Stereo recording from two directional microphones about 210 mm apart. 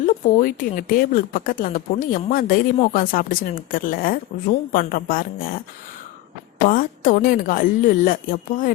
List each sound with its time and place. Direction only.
0.0 s speech: 40° left (ahead or behind)
6.7 s speech: 40° left (ahead or behind)